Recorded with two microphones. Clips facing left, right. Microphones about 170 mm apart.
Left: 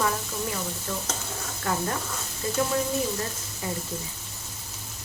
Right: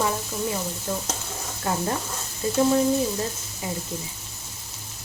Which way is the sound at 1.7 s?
25° right (ahead or behind).